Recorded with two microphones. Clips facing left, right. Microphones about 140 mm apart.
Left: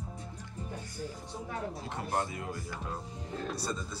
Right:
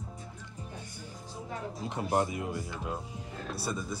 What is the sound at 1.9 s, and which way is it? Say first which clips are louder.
Speech: right 6 dB; 20° right (ahead or behind).